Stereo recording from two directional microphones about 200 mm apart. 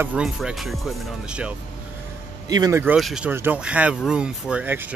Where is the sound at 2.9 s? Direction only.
5° right (ahead or behind).